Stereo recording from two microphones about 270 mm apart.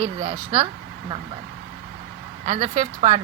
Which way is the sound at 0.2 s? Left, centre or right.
Right.